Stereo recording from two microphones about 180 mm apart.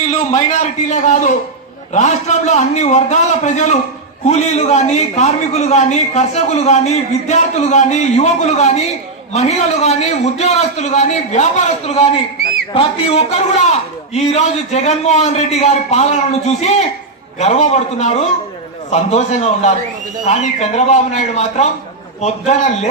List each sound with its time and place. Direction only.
0.1 s a man's voice: 40° left (ahead or behind)